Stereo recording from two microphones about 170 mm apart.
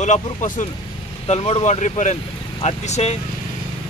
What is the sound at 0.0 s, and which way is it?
Speech, 45° left (ahead or behind).